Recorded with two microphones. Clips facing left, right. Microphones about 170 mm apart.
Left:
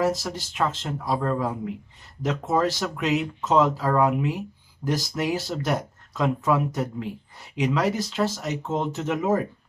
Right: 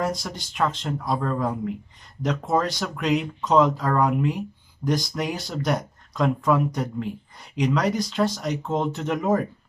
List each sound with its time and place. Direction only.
0.0 s speech: 5° left (ahead or behind)